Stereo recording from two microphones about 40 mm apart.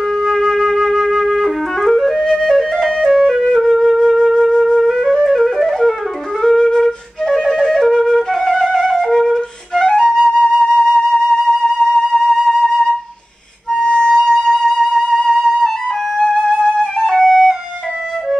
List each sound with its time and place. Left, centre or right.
0.2 s flute: centre
2.2 s flute: centre
2.5 s music: centre
3.7 s wind instrument: centre
4.4 s flute: centre
13.7 s music: centre
15.1 s flute: centre
16.3 s music: centre
17.1 s flute: centre